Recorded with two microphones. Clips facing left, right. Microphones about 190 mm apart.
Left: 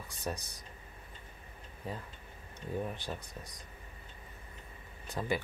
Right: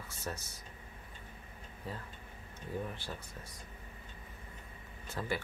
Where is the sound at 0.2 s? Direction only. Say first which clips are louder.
Left 4 dB; 15° left (ahead or behind).